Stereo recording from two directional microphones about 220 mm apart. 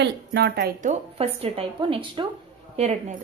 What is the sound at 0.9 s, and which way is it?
Speech, 25° right (ahead or behind).